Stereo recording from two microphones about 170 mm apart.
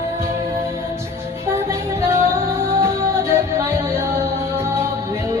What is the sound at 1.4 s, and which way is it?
Music, 15° right (ahead or behind).